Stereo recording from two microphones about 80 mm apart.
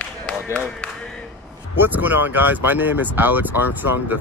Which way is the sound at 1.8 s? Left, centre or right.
Right.